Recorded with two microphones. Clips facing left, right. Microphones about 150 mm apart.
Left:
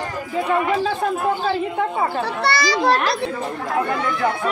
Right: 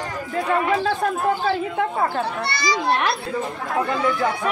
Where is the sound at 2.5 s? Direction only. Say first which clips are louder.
Left 7 dB; 85° left.